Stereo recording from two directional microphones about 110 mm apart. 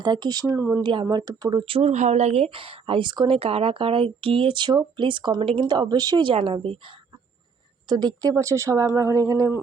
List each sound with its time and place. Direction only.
0.0 s speech: 40° right (ahead or behind)
0.5 s speech: 20° right (ahead or behind)
0.8 s a woman's voice: 45° right (ahead or behind)
1.9 s a woman's voice: 90° right; by 6.3 s 40° right (ahead or behind)
6.4 s speech: 50° right (ahead or behind)
7.9 s speech: 40° right (ahead or behind)